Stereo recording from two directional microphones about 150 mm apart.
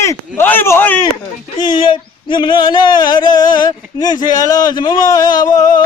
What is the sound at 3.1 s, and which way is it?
Speech, 30° left (ahead or behind).